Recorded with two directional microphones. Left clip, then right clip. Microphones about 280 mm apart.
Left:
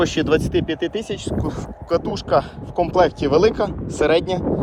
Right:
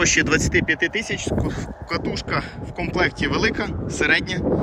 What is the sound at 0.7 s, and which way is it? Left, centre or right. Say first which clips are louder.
Speech: right 2 dB; left.